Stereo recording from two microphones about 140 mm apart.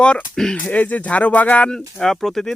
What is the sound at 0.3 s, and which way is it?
Speech, 5° left (ahead or behind).